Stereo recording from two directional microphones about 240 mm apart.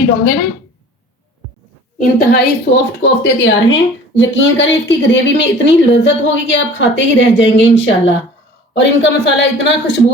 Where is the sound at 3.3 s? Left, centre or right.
Left.